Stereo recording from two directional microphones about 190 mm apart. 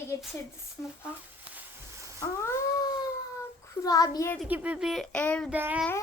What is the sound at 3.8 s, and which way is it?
Speech, 20° left (ahead or behind).